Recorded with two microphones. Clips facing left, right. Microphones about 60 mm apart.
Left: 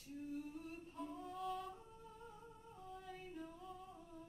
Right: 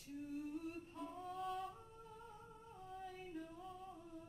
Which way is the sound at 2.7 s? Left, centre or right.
Centre.